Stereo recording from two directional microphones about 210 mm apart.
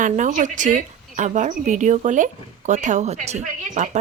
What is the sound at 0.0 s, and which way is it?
A woman's voice, 35° right (ahead or behind).